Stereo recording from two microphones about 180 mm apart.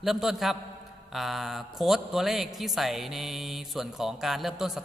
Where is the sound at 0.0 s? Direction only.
Centre (ahead or behind).